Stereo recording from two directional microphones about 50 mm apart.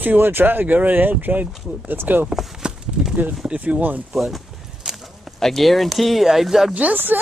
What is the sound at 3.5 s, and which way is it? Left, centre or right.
Speech, right.